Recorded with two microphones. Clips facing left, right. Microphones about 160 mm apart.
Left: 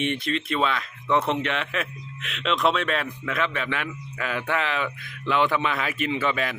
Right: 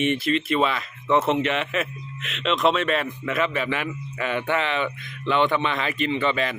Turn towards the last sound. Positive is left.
turn(degrees=5)  # may be behind; listen again after turning